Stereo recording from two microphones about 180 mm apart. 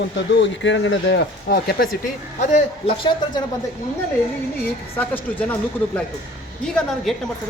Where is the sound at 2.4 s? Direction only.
35° left (ahead or behind).